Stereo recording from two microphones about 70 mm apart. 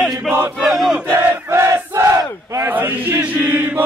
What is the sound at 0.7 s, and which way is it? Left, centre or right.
Battle cry, centre.